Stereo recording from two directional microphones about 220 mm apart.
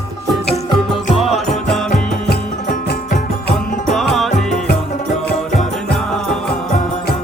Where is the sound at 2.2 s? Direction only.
45° left (ahead or behind).